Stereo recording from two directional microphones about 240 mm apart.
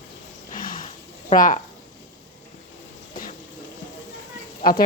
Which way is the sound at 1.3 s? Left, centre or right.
Left.